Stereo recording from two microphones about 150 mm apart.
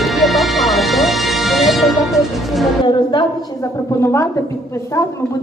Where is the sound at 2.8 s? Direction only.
30° left (ahead or behind).